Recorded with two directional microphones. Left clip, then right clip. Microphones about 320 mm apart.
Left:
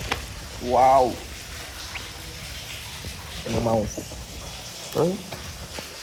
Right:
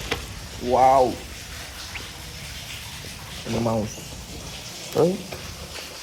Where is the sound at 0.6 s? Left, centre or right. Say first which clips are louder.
Even; centre.